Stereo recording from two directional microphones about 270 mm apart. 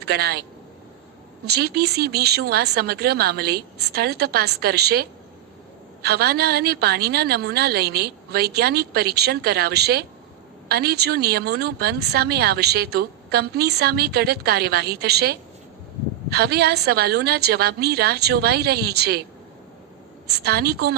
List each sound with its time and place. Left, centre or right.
0.0 s a man's voice: right
1.5 s speech: right
20.4 s speech: right